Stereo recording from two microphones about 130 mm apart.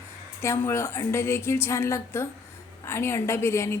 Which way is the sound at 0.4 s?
20° left (ahead or behind).